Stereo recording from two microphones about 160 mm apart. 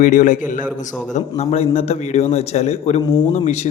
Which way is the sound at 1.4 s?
40° left (ahead or behind).